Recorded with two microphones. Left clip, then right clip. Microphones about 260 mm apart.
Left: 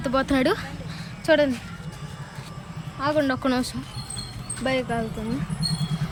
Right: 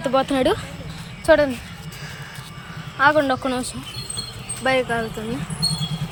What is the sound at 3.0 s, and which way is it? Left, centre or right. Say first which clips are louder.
Speech: right 5 dB; centre.